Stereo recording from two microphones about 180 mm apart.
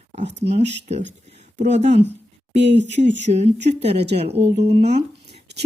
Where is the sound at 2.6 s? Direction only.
75° right (ahead or behind).